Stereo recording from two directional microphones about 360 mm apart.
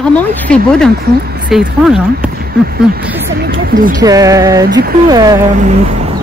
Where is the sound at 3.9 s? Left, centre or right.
Centre.